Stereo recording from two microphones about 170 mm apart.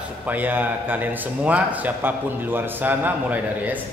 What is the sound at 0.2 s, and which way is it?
A man's voice, 10° right (ahead or behind).